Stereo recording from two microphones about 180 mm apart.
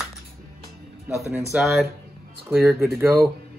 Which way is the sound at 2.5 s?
10° right (ahead or behind).